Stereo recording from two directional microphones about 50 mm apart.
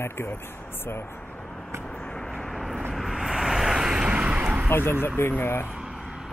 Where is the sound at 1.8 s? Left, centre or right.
Centre; by 4.6 s right.